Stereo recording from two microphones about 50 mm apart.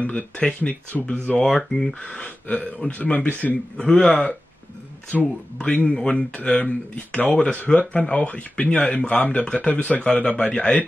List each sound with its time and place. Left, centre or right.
0.0 s speech: left
0.9 s speech: centre
2.1 s speech: left
3.7 s speech: centre